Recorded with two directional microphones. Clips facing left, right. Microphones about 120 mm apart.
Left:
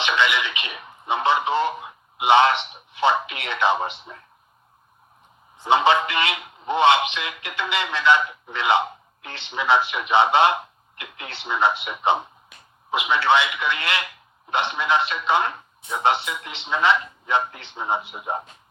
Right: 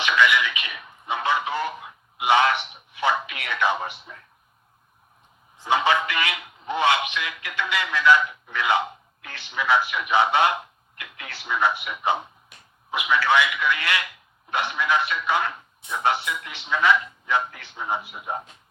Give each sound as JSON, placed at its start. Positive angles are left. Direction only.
{"t": 0.0, "sound": "radio", "side_deg": 25}
{"t": 5.5, "sound": "a man's voice", "side_deg": 25}